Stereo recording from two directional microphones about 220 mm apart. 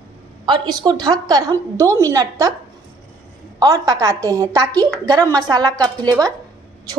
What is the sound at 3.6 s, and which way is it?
A woman's voice, 15° right (ahead or behind).